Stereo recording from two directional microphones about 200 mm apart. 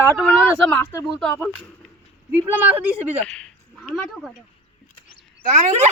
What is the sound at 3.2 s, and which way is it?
Speech, 5° left (ahead or behind).